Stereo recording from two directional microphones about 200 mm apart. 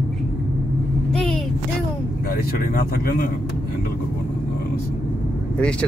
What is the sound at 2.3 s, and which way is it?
Speech, 45° left (ahead or behind).